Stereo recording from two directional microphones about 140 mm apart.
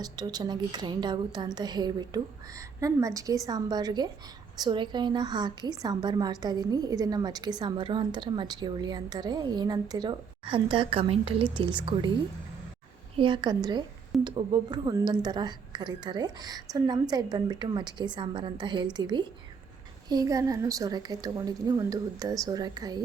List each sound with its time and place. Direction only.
0.0 s a woman's voice: 30° right (ahead or behind)
13.1 s a woman's voice: 35° right (ahead or behind)